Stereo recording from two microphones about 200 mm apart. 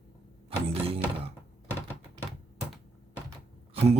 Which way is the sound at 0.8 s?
30° right (ahead or behind).